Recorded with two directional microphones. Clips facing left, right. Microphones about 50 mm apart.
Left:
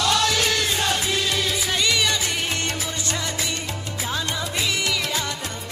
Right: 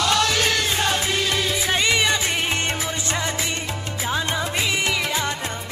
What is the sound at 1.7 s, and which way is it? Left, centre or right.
Music, right.